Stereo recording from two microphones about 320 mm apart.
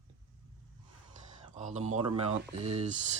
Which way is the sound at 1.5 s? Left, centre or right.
Right.